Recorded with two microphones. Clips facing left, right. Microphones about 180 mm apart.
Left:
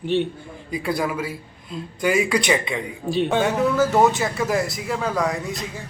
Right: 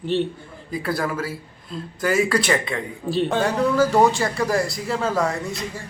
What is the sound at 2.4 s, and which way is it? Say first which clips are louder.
Speech: even; 15° left (ahead or behind).